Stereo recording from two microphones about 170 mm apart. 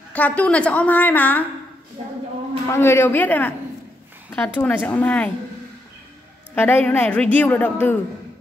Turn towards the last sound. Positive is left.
turn(degrees=10)  # may be behind; listen again after turning